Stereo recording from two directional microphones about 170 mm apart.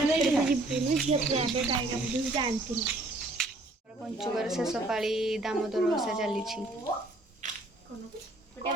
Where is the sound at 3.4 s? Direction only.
5° left (ahead or behind).